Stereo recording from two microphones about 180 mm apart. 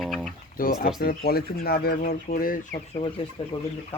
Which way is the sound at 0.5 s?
50° left (ahead or behind).